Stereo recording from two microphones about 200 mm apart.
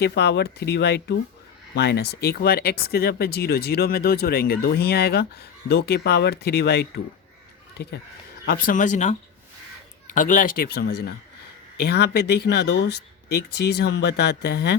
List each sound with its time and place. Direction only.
0.0 s speech: 55° left (ahead or behind)
8.4 s speech: 45° left (ahead or behind)
10.2 s speech: 40° left (ahead or behind); by 14.8 s 55° left (ahead or behind)